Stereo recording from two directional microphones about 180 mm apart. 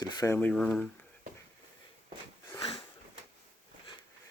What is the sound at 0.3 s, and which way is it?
Speech, 5° left (ahead or behind).